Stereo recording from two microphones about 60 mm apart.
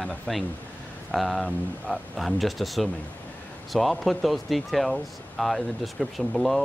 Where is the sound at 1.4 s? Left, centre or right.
Left.